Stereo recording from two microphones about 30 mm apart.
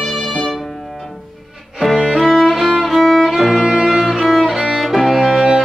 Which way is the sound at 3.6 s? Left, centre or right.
Centre.